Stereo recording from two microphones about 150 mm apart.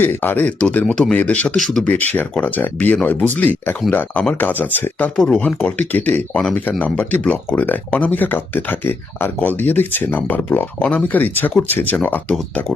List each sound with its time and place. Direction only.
0.0 s speech: 15° left (ahead or behind)